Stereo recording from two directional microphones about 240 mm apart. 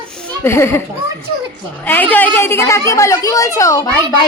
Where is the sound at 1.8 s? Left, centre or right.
Centre.